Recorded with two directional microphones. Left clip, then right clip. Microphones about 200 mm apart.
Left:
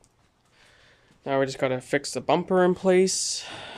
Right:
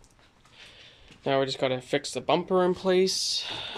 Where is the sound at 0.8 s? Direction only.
Centre (ahead or behind).